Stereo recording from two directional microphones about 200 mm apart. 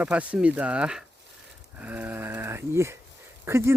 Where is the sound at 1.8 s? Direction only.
10° right (ahead or behind).